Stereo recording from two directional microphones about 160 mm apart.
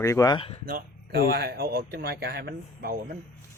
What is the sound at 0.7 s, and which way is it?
Speech, 70° right (ahead or behind).